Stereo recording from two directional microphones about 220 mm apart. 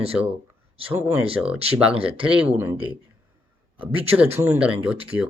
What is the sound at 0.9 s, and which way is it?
Speech, 10° right (ahead or behind).